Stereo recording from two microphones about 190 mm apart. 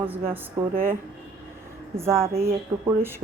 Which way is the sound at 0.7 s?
50° right (ahead or behind).